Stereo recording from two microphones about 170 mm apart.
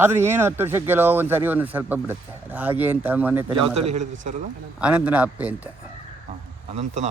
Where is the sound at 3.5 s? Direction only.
35° right (ahead or behind).